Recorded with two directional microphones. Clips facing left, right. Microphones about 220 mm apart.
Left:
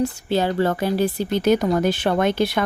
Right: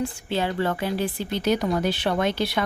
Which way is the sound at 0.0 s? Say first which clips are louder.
Left 5 dB; 40° left (ahead or behind).